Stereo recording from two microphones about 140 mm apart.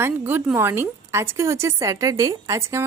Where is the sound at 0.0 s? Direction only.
15° right (ahead or behind).